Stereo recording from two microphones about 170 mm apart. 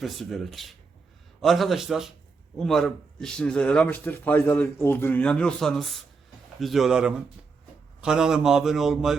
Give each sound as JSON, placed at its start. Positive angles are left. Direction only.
{"t": 0.0, "sound": "a man's voice", "side_deg": 0}